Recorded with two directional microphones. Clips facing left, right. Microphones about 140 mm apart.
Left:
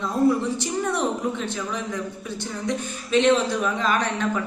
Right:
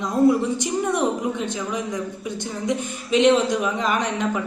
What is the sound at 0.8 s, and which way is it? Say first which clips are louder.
Speech: right 2 dB; 20° right (ahead or behind).